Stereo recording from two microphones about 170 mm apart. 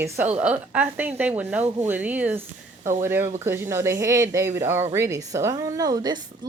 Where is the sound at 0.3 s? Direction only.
10° right (ahead or behind).